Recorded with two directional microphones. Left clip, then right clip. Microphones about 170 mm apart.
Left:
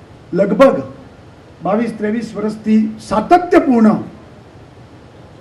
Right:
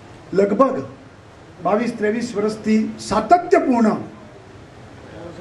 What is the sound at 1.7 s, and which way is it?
A man's voice, 45° right (ahead or behind).